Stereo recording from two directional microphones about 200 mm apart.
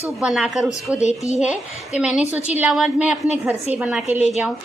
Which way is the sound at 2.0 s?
5° right (ahead or behind).